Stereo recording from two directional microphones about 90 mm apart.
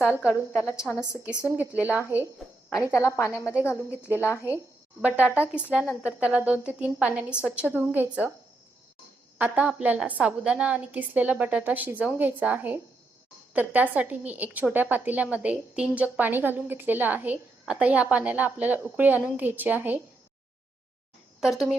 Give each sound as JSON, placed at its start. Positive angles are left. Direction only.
{"t": 0.0, "sound": "a woman's voice", "side_deg": -15}
{"t": 2.7, "sound": "a woman's voice", "side_deg": 35}
{"t": 5.0, "sound": "a woman's voice", "side_deg": -15}
{"t": 9.4, "sound": "a woman's voice", "side_deg": -15}